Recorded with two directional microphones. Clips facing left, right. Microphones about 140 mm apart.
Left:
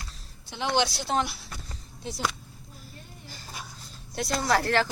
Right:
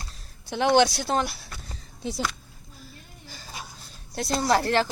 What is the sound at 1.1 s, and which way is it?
Speech, 40° right (ahead or behind).